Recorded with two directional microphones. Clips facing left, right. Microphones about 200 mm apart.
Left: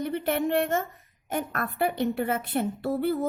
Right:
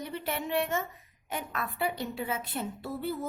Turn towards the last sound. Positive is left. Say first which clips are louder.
# left 8 dB
turn(degrees=65)  # may be behind; listen again after turning